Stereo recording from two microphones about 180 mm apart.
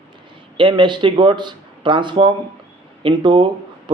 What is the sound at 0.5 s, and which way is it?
A man's voice, 25° right (ahead or behind).